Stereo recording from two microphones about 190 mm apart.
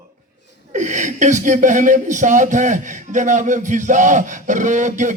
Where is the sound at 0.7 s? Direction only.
40° right (ahead or behind).